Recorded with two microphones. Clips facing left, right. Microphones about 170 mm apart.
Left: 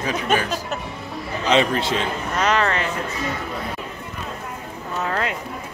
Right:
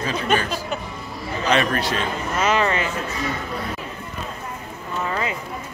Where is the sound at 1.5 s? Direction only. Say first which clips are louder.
Left 2 dB; 20° left (ahead or behind).